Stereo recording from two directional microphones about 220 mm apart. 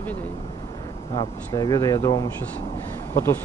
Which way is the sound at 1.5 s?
15° left (ahead or behind).